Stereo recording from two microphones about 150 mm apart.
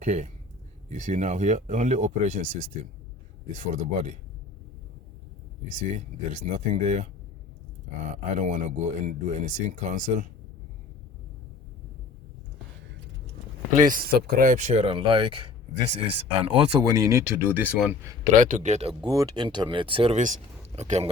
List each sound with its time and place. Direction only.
0.0 s speech: 50° right (ahead or behind)
3.6 s speech: 50° right (ahead or behind)
6.3 s speech: 50° right (ahead or behind)
8.1 s speech: 50° right (ahead or behind)
13.7 s speech: 65° right (ahead or behind); by 14.5 s 85° right
14.5 s speech: 50° right (ahead or behind)
16.8 s speech: 20° right (ahead or behind)
18.3 s speech: 55° right (ahead or behind)
19.0 s speech: 25° right (ahead or behind)
20.1 s speech: 55° right (ahead or behind)